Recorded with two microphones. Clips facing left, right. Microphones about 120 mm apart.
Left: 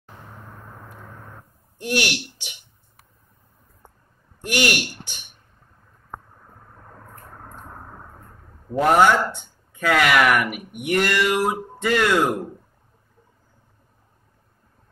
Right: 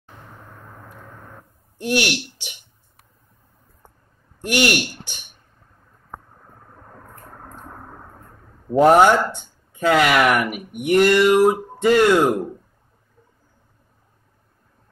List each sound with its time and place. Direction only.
1.8 s speech: 25° right (ahead or behind)
4.4 s a woman's voice: 30° right (ahead or behind)
8.7 s speech: 30° right (ahead or behind)
12.1 s speech: 20° right (ahead or behind)